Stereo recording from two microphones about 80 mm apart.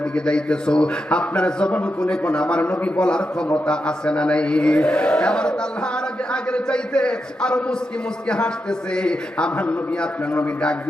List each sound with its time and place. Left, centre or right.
0.3 s a man's voice: centre
9.0 s a man's voice: centre